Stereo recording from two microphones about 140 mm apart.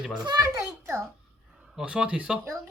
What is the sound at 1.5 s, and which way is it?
Speech, 5° right (ahead or behind).